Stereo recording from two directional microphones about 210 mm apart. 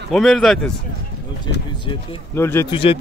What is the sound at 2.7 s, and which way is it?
Speech, 25° left (ahead or behind).